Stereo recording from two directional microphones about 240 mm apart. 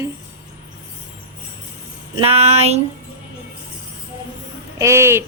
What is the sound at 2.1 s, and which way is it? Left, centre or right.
Music, right.